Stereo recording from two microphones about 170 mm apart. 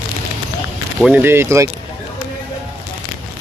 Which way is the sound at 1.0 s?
10° right (ahead or behind).